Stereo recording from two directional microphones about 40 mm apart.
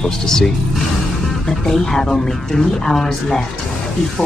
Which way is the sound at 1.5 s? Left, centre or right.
Centre.